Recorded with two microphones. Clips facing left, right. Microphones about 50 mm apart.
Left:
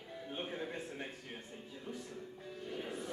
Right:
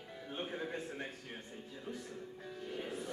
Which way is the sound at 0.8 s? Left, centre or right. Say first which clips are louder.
Right 1 dB; right.